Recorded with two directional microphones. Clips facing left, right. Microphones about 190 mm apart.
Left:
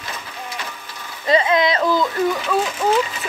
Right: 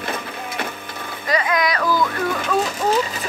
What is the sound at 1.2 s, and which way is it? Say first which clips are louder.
Speech: left 4 dB; 25° left (ahead or behind).